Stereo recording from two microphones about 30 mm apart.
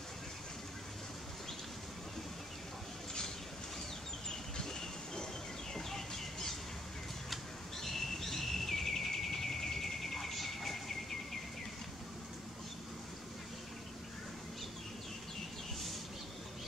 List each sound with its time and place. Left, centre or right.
4.3 s a sound: centre
5.8 s chicken: centre
7.8 s bird: centre